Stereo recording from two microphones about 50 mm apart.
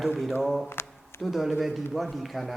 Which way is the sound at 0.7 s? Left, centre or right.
Left.